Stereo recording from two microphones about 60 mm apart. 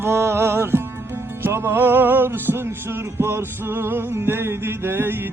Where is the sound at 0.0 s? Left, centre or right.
Right.